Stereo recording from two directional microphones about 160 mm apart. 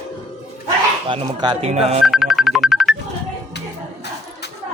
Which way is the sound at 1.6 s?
45° right (ahead or behind).